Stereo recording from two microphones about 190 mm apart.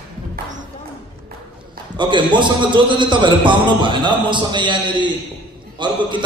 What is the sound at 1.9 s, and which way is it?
A man's voice, 25° right (ahead or behind).